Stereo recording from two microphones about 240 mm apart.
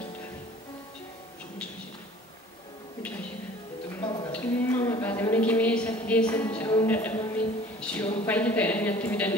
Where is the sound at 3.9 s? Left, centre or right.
Centre.